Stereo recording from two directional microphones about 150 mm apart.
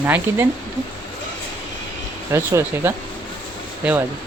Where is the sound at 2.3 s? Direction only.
15° right (ahead or behind).